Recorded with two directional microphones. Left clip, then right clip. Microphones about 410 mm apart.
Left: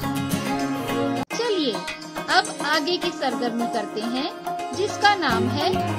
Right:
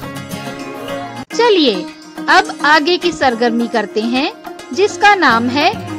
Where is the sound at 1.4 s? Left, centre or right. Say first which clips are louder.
Right 14 dB; centre.